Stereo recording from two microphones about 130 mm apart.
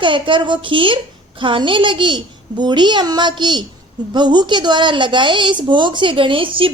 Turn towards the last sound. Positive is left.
turn(degrees=-40)  # may be behind; listen again after turning